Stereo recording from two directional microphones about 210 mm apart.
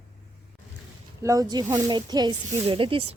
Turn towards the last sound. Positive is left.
turn(degrees=-25)  # may be behind; listen again after turning